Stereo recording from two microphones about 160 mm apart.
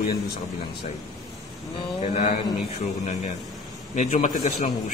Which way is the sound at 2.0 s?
40° left (ahead or behind).